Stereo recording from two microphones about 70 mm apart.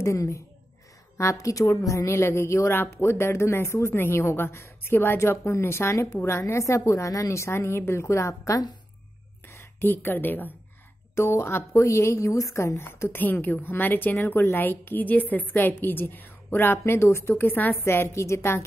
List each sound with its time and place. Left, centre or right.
0.0 s a woman's voice: left
9.5 s a woman's voice: left
11.1 s speech: left
13.1 s a woman's voice: left